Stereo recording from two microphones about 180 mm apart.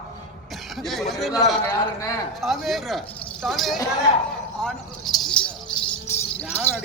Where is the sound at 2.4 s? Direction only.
Centre (ahead or behind).